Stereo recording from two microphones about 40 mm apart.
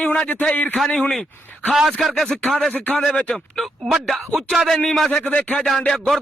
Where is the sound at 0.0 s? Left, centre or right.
Left.